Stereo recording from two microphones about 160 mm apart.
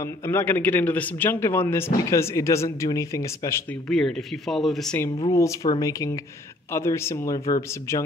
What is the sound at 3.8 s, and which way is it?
Speech, 5° left (ahead or behind).